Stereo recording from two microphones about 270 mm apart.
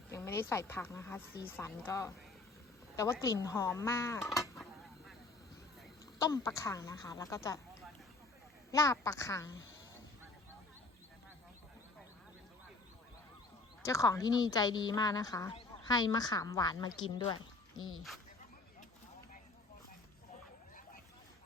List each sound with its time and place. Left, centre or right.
0.1 s a woman's voice: centre
6.1 s a woman's voice: centre
8.7 s a woman's voice: centre
13.8 s a woman's voice: centre
17.7 s speech: left